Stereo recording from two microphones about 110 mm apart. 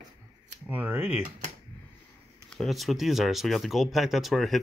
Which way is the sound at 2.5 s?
Centre (ahead or behind).